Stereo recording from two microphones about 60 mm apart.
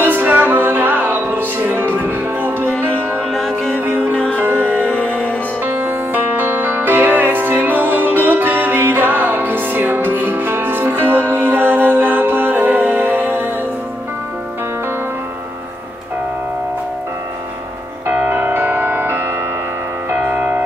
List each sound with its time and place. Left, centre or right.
0.0 s music: right
3.3 s music: centre
3.8 s music: right
5.0 s music: left
5.6 s music: right
18.3 s music: right
20.2 s music: right